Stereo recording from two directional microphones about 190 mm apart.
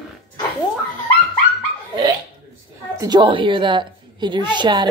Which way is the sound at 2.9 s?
20° right (ahead or behind).